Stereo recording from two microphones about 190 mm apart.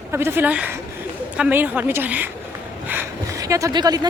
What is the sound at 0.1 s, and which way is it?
A woman's voice, 15° right (ahead or behind).